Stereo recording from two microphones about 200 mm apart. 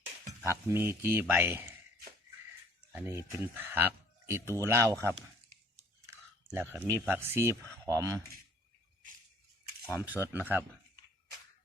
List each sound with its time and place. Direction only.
0.7 s speech: 10° right (ahead or behind)
2.9 s speech: 10° right (ahead or behind)
9.8 s speech: 15° left (ahead or behind)
10.3 s speech: 10° right (ahead or behind)